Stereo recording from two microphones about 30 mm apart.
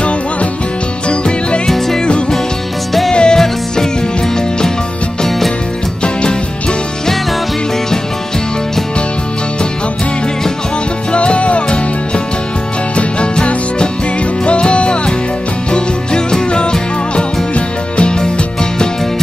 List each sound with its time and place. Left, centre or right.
1.0 s music: left
3.1 s music: left
11.1 s music: left
12.9 s music: left
17.6 s music: left